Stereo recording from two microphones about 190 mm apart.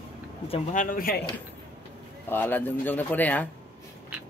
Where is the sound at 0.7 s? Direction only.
45° left (ahead or behind).